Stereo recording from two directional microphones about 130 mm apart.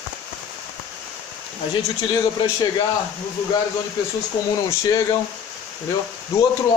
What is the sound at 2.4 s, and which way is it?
Speech, 35° left (ahead or behind).